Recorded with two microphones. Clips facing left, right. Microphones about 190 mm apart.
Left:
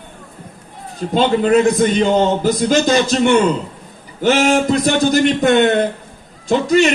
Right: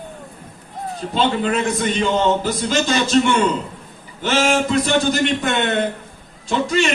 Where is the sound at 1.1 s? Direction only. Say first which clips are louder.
Left 7 dB; 40° left (ahead or behind).